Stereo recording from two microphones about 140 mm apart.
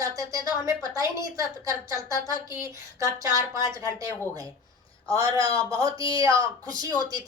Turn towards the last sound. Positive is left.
turn(degrees=-30)  # may be behind; listen again after turning